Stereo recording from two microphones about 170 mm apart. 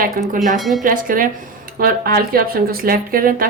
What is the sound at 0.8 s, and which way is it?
Speech, 55° right (ahead or behind).